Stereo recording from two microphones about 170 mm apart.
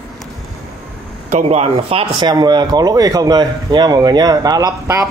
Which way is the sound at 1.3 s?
40° right (ahead or behind).